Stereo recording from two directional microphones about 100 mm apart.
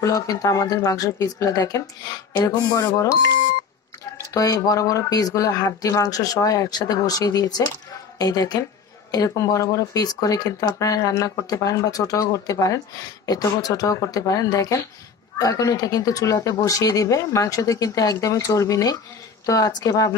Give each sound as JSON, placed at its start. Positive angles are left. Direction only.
{"t": 0.0, "sound": "speech", "side_deg": 35}
{"t": 4.3, "sound": "speech", "side_deg": 35}